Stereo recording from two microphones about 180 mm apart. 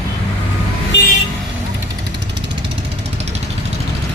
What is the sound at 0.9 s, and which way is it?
Vehicle, 80° left.